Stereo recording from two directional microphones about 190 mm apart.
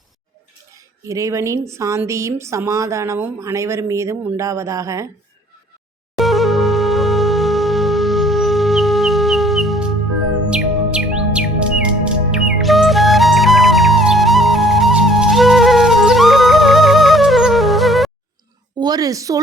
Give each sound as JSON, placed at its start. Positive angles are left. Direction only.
{"t": 0.7, "sound": "a woman's voice", "side_deg": -15}
{"t": 6.1, "sound": "music", "side_deg": 0}
{"t": 10.5, "sound": "chirp", "side_deg": -5}
{"t": 18.8, "sound": "a woman's voice", "side_deg": -20}